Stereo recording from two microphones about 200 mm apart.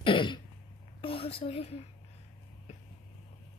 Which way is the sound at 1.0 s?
30° left (ahead or behind).